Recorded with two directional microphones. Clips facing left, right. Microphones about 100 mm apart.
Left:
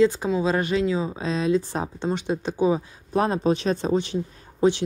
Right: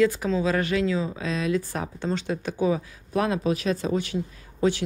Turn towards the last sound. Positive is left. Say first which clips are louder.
# left 3 dB
turn(degrees=20)  # may be behind; listen again after turning